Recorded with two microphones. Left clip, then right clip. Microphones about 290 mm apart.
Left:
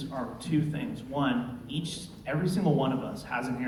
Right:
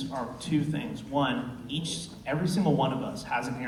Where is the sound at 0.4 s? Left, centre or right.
Right.